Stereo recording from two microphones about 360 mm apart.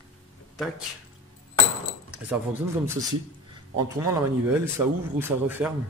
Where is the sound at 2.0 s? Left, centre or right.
Centre.